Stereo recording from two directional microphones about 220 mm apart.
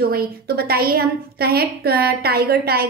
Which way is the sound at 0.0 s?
45° right (ahead or behind).